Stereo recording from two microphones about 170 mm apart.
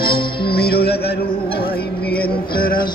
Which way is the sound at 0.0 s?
65° left (ahead or behind).